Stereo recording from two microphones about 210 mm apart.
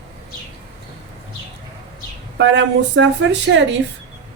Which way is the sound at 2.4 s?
60° right (ahead or behind).